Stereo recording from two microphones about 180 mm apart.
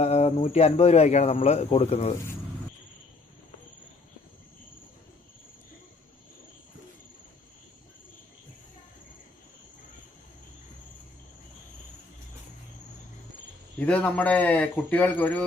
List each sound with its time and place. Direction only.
0.0 s speech: 35° left (ahead or behind)
13.7 s a man's voice: 5° left (ahead or behind)